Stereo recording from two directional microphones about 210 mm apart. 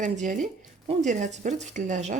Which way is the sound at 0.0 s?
35° right (ahead or behind).